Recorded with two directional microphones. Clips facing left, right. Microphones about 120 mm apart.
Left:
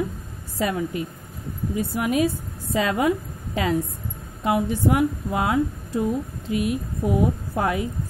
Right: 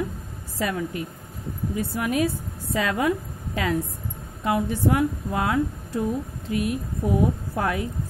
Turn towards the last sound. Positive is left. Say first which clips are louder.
# left 2 dB
turn(degrees=20)  # may be behind; listen again after turning